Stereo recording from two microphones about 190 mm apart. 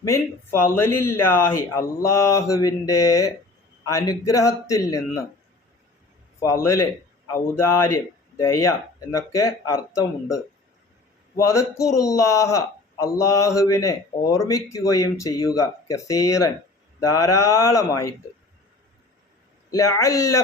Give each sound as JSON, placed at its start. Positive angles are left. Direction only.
{"t": 0.0, "sound": "speech", "side_deg": 15}
{"t": 6.4, "sound": "speech", "side_deg": 15}
{"t": 19.7, "sound": "speech", "side_deg": 15}